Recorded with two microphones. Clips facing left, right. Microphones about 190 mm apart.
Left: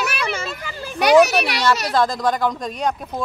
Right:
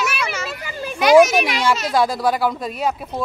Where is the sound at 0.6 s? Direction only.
15° right (ahead or behind).